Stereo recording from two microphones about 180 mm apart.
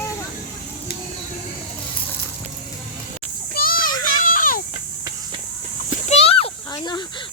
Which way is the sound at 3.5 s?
55° left (ahead or behind).